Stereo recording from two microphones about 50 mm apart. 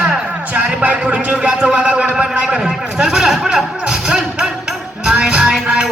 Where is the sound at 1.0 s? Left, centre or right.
Right.